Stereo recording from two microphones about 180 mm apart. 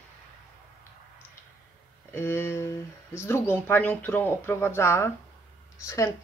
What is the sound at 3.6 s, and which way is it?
Speech, 10° left (ahead or behind).